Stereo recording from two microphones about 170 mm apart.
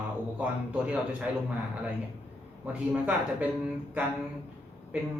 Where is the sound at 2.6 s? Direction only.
5° right (ahead or behind).